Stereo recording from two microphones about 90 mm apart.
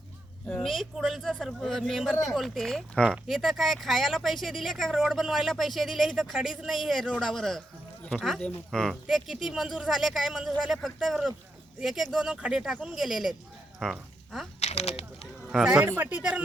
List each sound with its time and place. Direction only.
0.4 s speech: 5° left (ahead or behind)
14.8 s speech: 90° left
15.4 s speech: 5° right (ahead or behind)
15.8 s speech: 20° right (ahead or behind)